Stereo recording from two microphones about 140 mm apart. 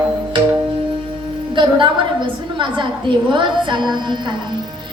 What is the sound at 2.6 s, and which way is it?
Music, 35° right (ahead or behind).